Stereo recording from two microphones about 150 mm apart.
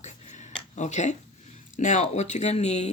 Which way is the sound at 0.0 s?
50° left (ahead or behind).